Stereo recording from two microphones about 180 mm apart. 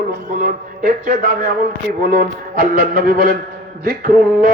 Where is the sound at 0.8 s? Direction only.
50° right (ahead or behind).